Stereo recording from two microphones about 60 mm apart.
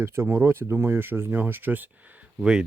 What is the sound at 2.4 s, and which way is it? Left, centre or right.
Speech, centre.